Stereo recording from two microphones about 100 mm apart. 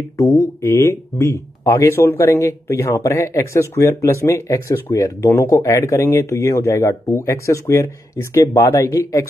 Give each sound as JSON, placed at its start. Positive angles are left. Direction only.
{"t": 0.2, "sound": "speech", "side_deg": 30}